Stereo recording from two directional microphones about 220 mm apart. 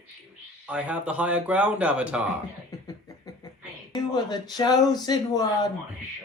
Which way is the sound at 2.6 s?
15° left (ahead or behind).